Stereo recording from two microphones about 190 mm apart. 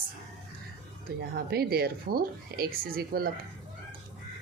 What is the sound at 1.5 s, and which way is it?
A woman's voice, 55° right (ahead or behind).